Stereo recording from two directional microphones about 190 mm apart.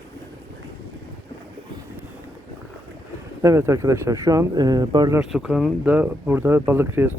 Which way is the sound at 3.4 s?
15° right (ahead or behind).